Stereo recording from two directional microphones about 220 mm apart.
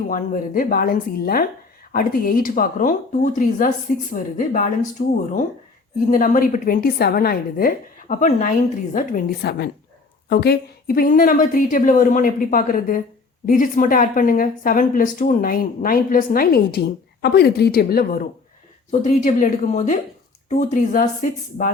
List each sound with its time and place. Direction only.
0.1 s a woman's voice: 40° left (ahead or behind)